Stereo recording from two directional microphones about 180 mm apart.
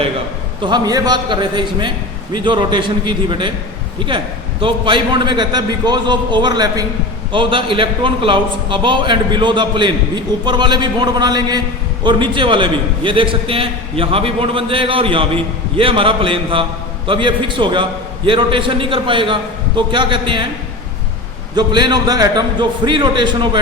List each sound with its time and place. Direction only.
0.6 s a man's voice: 20° right (ahead or behind)
4.6 s a man's voice: 25° right (ahead or behind)
21.5 s a man's voice: 25° right (ahead or behind)